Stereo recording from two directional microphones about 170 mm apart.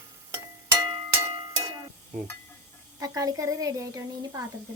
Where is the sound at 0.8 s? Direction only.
20° right (ahead or behind).